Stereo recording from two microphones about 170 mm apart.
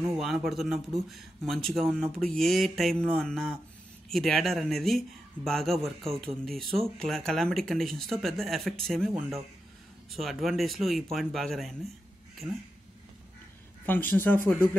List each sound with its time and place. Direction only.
0.2 s speech: centre (ahead or behind)
10.1 s speech: centre (ahead or behind)
12.4 s speech: 10° right (ahead or behind)
13.8 s speech: 10° left (ahead or behind)